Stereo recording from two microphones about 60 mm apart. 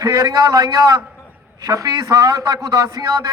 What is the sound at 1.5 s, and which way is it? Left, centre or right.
A man's voice, right.